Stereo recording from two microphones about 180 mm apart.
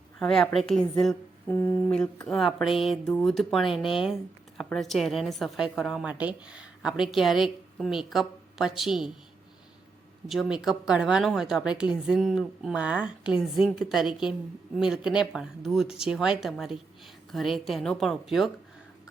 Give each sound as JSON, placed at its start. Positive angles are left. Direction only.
{"t": 0.2, "sound": "a woman's voice", "side_deg": 5}
{"t": 10.2, "sound": "a woman's voice", "side_deg": 0}